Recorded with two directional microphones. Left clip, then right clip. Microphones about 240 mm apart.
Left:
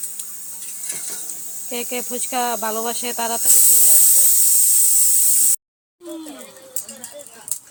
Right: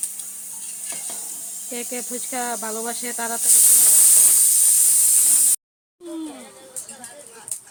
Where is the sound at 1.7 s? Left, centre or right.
Centre.